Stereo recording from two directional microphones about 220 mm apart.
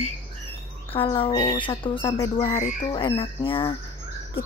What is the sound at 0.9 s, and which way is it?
Speech, 25° left (ahead or behind).